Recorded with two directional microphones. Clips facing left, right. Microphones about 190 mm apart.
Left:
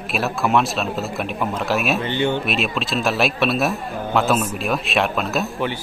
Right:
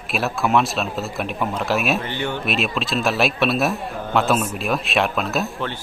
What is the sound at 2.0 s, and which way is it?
Speech, 20° left (ahead or behind).